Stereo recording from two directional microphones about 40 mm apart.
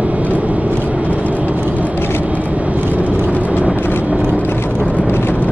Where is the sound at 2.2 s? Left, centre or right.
Right.